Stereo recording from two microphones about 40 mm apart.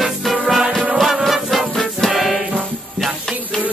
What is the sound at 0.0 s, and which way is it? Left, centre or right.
Music, centre.